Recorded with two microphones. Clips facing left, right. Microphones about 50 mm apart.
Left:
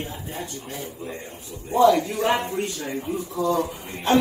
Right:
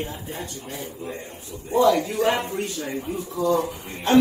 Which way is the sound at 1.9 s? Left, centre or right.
Left.